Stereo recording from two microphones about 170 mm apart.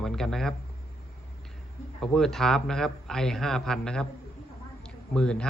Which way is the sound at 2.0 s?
Centre (ahead or behind).